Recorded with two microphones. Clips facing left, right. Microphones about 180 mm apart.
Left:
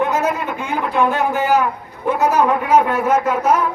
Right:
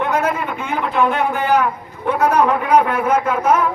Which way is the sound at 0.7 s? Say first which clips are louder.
Even; 10° left (ahead or behind).